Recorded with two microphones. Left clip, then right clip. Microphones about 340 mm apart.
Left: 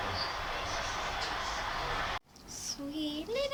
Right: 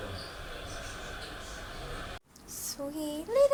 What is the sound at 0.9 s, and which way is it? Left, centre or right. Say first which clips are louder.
Vehicle: left 7 dB; centre.